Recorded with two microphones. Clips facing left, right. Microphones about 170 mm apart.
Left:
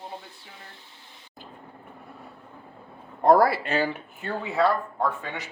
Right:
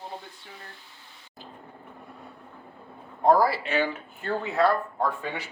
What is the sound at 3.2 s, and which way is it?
Speech, 65° left (ahead or behind).